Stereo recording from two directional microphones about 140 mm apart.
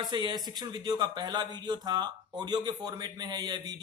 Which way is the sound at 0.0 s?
30° right (ahead or behind).